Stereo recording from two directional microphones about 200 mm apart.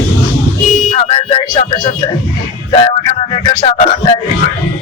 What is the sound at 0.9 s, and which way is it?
Music, 30° left (ahead or behind).